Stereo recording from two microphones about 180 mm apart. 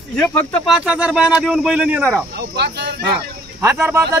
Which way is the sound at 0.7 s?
5° right (ahead or behind).